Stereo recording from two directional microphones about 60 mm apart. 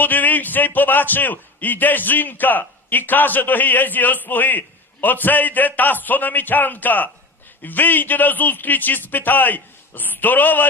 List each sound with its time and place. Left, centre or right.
0.0 s a man's voice: left